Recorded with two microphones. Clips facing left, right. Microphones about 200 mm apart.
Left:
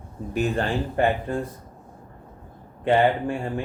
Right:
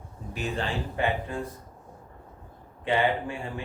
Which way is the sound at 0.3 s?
50° left (ahead or behind).